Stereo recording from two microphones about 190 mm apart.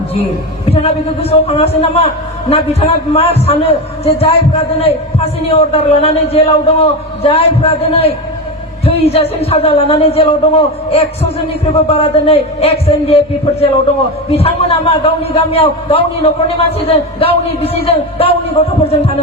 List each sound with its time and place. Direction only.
0.6 s speech: 30° left (ahead or behind)